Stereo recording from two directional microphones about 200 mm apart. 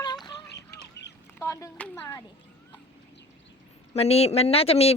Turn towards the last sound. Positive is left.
turn(degrees=30)  # may be behind; listen again after turning